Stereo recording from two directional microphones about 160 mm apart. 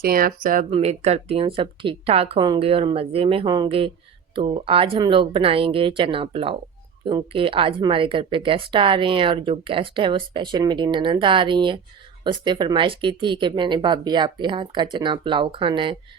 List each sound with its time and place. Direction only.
0.0 s speech: 65° right (ahead or behind)
0.7 s speech: 40° right (ahead or behind)